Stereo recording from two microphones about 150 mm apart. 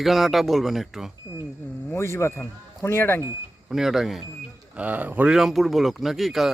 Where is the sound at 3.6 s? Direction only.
5° right (ahead or behind).